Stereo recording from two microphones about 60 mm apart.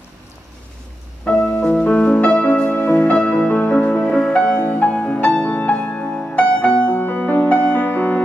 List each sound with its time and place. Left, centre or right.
1.4 s music: left